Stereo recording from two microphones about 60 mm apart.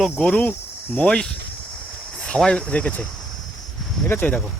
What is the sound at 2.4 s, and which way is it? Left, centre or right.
Speech, centre.